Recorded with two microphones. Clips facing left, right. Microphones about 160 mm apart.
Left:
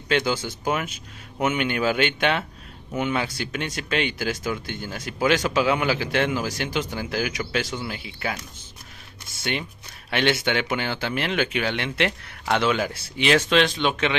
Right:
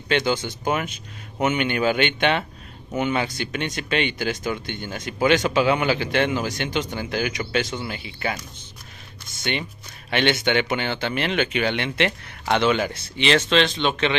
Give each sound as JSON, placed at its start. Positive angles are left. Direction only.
{"t": 0.1, "sound": "speech", "side_deg": 5}
{"t": 9.4, "sound": "speech", "side_deg": 0}